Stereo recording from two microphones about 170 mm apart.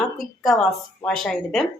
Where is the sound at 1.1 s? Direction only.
5° left (ahead or behind).